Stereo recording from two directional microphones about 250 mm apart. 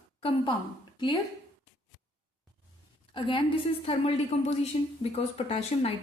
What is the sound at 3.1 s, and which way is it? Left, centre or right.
A woman's voice, centre.